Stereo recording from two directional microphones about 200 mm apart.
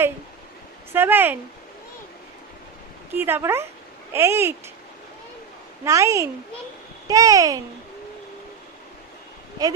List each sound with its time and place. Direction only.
0.9 s speech: 10° right (ahead or behind)
3.1 s speech: 10° right (ahead or behind)
5.8 s speech: 15° right (ahead or behind)